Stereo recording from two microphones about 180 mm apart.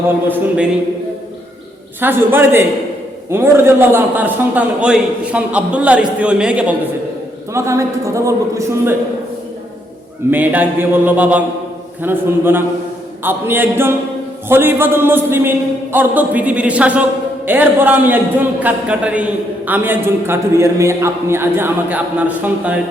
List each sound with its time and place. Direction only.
0.3 s a man's voice: 5° right (ahead or behind)
2.0 s a man's voice: 10° right (ahead or behind)
7.5 s a man's voice: 15° right (ahead or behind)
10.3 s a man's voice: 10° right (ahead or behind)